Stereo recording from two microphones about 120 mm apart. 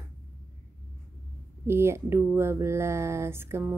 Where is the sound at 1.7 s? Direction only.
20° right (ahead or behind).